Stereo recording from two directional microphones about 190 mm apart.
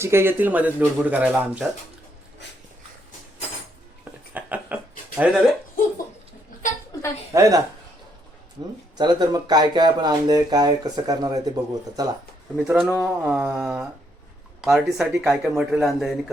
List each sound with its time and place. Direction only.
0.0 s speech: 15° right (ahead or behind)
4.4 s a sound: 10° right (ahead or behind)
6.9 s a sound: 20° left (ahead or behind)
7.3 s speech: 15° right (ahead or behind)
9.0 s speech: 20° right (ahead or behind)
12.6 s speech: 10° right (ahead or behind)